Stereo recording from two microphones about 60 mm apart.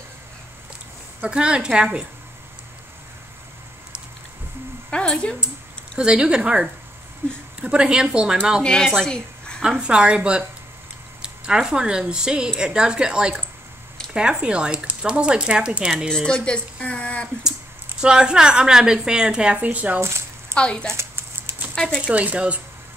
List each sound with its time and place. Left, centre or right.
1.3 s a woman's voice: centre
4.9 s speech: centre
5.9 s a woman's voice: centre
7.2 s a sound: right
7.6 s a woman's voice: centre
8.8 s a woman's voice: centre
9.6 s a woman's voice: centre
16.1 s speech: centre
18.0 s a woman's voice: centre
20.0 s squish: right
20.5 s speech: centre
20.9 s a sound: right
22.0 s speech: right